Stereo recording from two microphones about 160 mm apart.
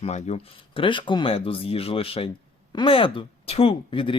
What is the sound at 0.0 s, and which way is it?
Speech, 45° left (ahead or behind).